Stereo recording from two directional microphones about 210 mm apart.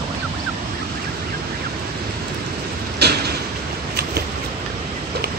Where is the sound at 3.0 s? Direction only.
50° right (ahead or behind).